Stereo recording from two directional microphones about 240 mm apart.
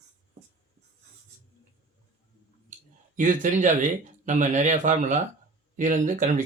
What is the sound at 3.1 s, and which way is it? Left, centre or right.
Speech, right.